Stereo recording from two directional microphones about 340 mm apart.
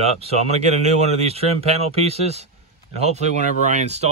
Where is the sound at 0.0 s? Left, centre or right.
Centre.